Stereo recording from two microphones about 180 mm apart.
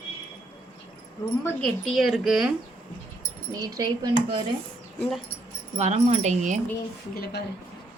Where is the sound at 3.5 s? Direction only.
20° right (ahead or behind).